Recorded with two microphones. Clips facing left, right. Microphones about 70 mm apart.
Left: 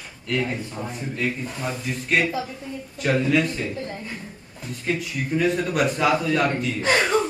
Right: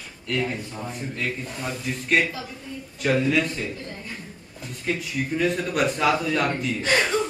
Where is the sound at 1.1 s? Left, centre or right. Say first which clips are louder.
Left 5 dB; centre.